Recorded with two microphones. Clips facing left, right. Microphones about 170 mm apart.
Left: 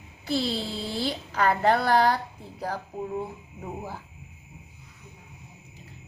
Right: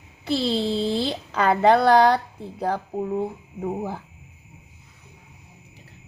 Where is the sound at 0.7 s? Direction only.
25° right (ahead or behind).